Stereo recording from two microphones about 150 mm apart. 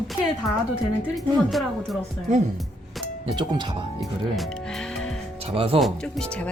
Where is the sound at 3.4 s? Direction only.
30° right (ahead or behind).